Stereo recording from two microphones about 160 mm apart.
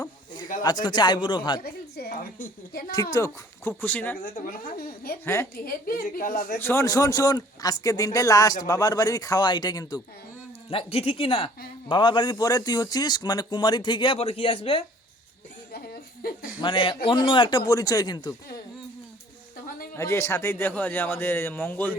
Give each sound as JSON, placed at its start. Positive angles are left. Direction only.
{"t": 0.6, "sound": "speech", "side_deg": 25}
{"t": 1.6, "sound": "a sound", "side_deg": 70}
{"t": 2.9, "sound": "speech", "side_deg": 20}
{"t": 4.2, "sound": "a woman's voice", "side_deg": 60}
{"t": 5.2, "sound": "speech", "side_deg": 15}
{"t": 5.6, "sound": "a woman's voice", "side_deg": 65}
{"t": 6.6, "sound": "speech", "side_deg": 15}
{"t": 10.7, "sound": "speech", "side_deg": 35}
{"t": 15.7, "sound": "a sound", "side_deg": 70}
{"t": 16.6, "sound": "speech", "side_deg": 30}
{"t": 20.0, "sound": "speech", "side_deg": 15}